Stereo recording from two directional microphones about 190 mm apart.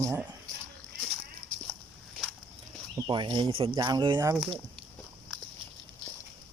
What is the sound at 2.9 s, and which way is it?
Speech, 20° right (ahead or behind).